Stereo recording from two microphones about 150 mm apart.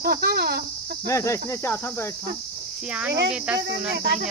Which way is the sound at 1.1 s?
20° left (ahead or behind).